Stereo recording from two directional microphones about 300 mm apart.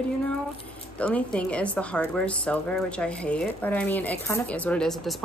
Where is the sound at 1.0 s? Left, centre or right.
Centre.